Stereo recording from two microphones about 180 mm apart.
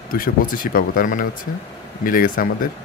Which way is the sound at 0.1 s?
50° left (ahead or behind).